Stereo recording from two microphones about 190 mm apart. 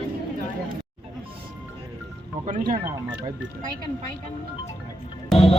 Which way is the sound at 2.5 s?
40° right (ahead or behind).